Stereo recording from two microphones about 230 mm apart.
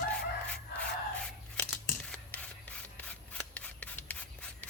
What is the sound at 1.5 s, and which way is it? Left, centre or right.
Rub, centre.